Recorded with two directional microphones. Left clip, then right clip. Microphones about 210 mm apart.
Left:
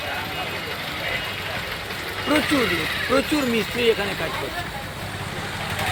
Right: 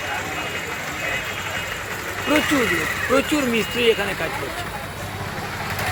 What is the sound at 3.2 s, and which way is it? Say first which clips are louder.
Speech: right 1 dB; centre (ahead or behind).